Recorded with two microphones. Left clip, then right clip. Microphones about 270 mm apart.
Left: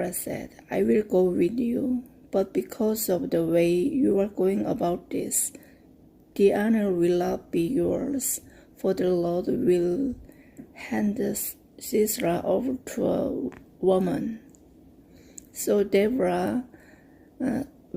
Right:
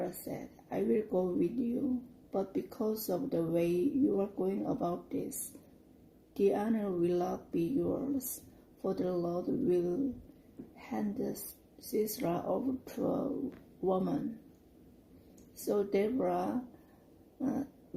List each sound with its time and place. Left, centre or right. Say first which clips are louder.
0.0 s speech: left 8 dB; left
6.3 s speech: left 9 dB; left
15.6 s speech: left 9 dB; left